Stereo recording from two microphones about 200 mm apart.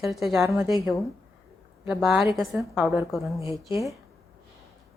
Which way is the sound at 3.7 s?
15° right (ahead or behind).